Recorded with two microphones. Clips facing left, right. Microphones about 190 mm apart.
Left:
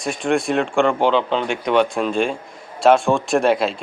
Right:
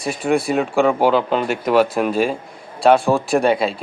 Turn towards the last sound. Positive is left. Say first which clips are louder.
# right 1 dB
turn(degrees=0)  # may be behind; listen again after turning